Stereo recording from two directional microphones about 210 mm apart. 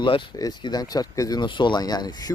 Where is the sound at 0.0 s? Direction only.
20° left (ahead or behind).